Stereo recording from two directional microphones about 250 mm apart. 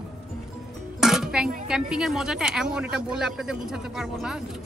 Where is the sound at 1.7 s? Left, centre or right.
Centre.